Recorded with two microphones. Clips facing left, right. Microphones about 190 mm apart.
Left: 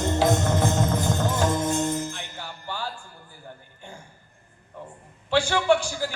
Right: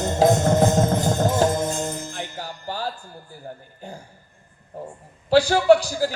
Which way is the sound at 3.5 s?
40° right (ahead or behind).